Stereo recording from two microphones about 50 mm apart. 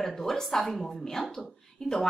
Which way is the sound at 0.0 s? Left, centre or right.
Centre.